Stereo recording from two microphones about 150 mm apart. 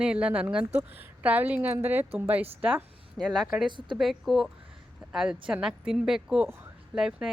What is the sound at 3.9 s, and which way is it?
Speech, centre (ahead or behind).